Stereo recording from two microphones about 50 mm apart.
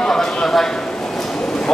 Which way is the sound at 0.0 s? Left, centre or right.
Centre.